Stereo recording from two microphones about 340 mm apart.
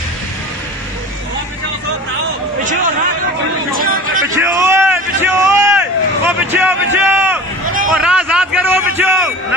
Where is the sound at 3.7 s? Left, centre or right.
Right.